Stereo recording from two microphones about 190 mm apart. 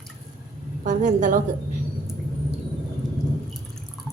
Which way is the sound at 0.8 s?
40° right (ahead or behind).